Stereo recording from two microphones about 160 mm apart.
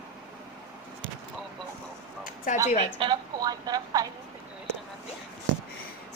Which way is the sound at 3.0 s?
30° right (ahead or behind).